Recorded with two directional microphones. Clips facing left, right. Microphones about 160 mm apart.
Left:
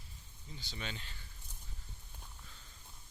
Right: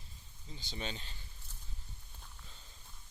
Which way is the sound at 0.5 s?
25° right (ahead or behind).